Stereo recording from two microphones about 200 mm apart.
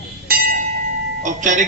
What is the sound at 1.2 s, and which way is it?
Speech, 40° right (ahead or behind).